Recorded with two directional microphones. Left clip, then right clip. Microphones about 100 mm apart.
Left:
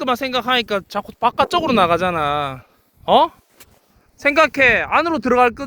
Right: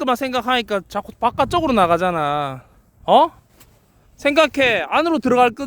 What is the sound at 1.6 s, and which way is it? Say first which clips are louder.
A man's voice: even; 40° right (ahead or behind).